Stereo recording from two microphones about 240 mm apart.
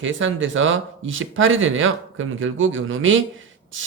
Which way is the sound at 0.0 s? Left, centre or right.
Right.